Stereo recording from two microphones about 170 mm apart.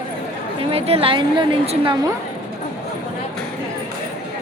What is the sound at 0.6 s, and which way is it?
A woman's voice, 35° right (ahead or behind).